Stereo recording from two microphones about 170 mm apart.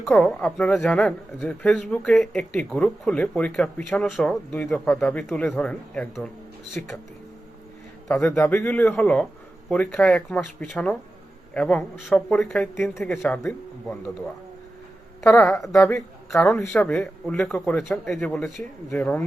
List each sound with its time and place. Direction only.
0.0 s speech: 5° left (ahead or behind)
8.4 s speech: 15° left (ahead or behind)
15.4 s speech: 15° left (ahead or behind)
16.3 s speech: centre (ahead or behind)